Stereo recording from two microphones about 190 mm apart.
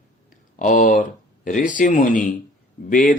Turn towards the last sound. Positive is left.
turn(degrees=45)  # may be behind; listen again after turning